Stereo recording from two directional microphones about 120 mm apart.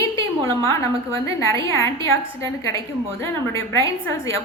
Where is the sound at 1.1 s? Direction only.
25° left (ahead or behind).